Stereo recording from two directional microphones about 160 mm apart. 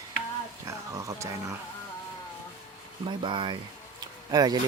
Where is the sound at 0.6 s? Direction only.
20° right (ahead or behind).